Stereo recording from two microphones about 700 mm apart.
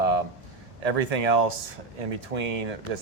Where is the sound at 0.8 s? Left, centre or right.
Right.